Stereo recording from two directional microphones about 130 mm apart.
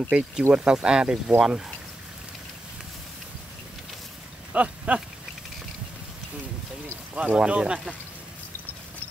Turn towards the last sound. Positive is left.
turn(degrees=-10)  # may be behind; listen again after turning